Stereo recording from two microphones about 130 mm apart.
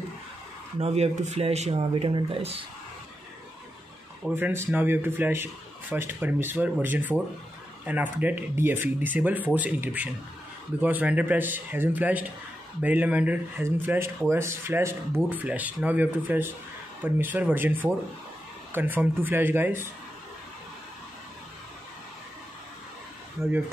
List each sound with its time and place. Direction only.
0.7 s speech: 55° right (ahead or behind)
4.4 s speech: 20° right (ahead or behind)